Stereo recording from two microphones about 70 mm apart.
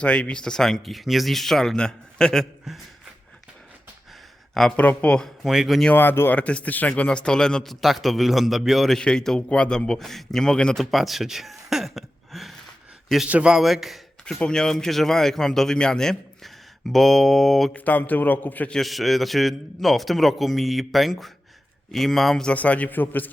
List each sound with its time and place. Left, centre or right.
0.0 s speech: centre
4.8 s speech: centre
5.4 s speech: centre
5.9 s speech: left
6.4 s speech: centre
10.9 s a sound: centre
13.2 s a man's voice: centre
13.6 s a man's voice: centre
14.3 s a man's voice: centre
17.7 s a man's voice: left
18.7 s a man's voice: centre
22.5 s a man's voice: left